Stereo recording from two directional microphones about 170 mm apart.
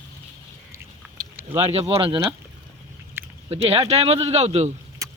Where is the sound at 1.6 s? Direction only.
35° right (ahead or behind).